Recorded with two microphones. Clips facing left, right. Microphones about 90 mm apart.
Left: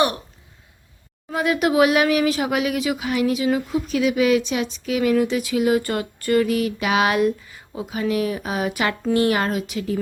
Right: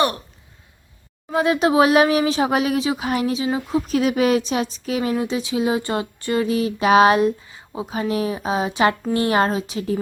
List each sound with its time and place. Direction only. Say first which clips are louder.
1.3 s a woman's voice: right 2 dB; 30° right (ahead or behind)